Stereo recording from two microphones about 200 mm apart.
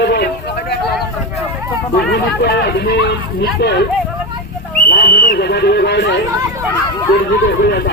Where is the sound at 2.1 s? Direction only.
55° left (ahead or behind).